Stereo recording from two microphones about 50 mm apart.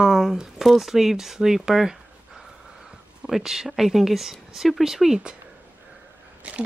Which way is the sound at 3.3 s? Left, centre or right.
Centre.